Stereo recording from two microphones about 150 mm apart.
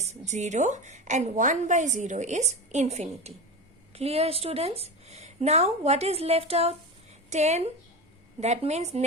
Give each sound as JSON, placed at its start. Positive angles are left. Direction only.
{"t": 0.0, "sound": "a woman's voice", "side_deg": -50}